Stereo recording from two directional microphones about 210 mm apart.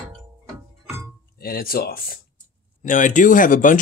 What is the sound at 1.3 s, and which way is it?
Speech, 45° left (ahead or behind).